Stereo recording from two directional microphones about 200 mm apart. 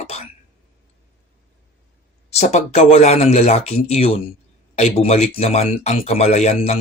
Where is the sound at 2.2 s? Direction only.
35° left (ahead or behind).